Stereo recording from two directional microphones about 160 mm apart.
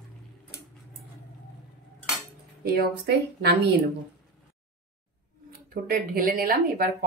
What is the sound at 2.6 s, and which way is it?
Speech, 85° right.